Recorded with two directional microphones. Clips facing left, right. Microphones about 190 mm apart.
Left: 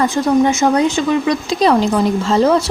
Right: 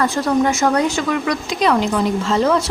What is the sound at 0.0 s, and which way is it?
Speech, 20° left (ahead or behind).